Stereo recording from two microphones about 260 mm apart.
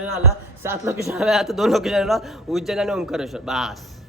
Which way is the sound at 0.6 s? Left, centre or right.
Centre.